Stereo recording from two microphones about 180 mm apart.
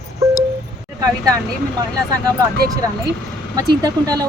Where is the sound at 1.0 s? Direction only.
20° right (ahead or behind).